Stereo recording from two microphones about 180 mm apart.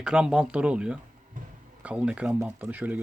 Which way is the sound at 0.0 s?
5° right (ahead or behind).